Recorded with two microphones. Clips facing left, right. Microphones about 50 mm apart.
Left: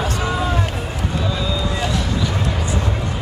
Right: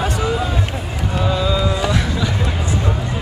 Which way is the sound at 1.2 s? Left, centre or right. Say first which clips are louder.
Right 7 dB; right.